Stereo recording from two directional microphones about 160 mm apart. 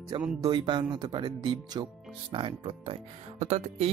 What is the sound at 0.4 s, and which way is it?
Speech, 30° right (ahead or behind).